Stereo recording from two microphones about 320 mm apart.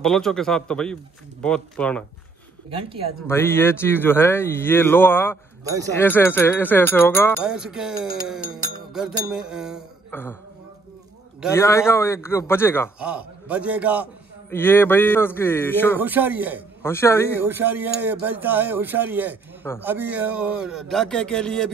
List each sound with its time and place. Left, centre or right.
0.0 s speech: centre
2.7 s speech: centre
3.3 s speech: centre
5.6 s speech: centre
5.9 s speech: centre
11.5 s speech: centre
13.0 s speech: centre
14.5 s speech: centre
16.0 s speech: centre
16.8 s speech: centre
17.4 s speech: centre